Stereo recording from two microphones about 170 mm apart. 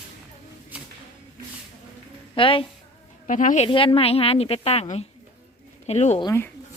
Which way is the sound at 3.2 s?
50° left (ahead or behind).